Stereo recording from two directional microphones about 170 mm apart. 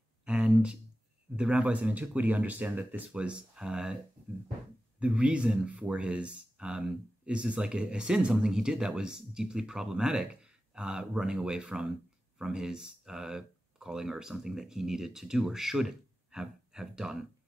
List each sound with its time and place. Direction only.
0.2 s a sound: 5° right (ahead or behind)
1.3 s speech: 5° right (ahead or behind)
5.0 s speech: 5° right (ahead or behind)